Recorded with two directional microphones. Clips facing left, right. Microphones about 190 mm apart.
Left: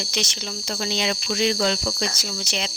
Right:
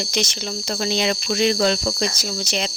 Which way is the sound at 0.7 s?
45° right (ahead or behind).